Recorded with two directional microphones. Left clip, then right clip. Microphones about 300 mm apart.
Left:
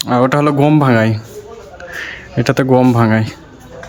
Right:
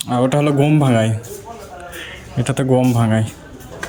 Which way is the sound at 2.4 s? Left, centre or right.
Centre.